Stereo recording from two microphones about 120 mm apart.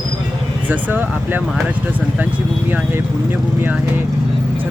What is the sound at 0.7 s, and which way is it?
Speech, 15° right (ahead or behind).